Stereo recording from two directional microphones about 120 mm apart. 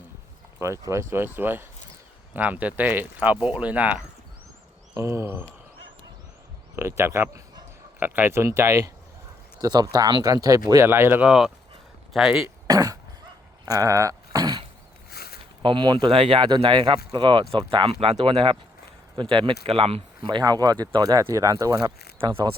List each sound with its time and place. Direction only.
0.6 s speech: 25° right (ahead or behind)
4.9 s speech: 25° right (ahead or behind)
6.7 s speech: 20° right (ahead or behind)
10.8 s speech: 20° right (ahead or behind)
11.3 s speech: 5° right (ahead or behind)
12.6 s cough: 30° right (ahead or behind)
13.7 s a sound: 30° right (ahead or behind)
15.6 s speech: 45° right (ahead or behind)
22.2 s speech: 45° right (ahead or behind)